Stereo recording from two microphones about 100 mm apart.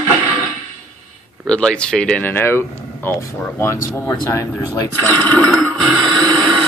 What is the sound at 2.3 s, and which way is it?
Speech, 25° left (ahead or behind).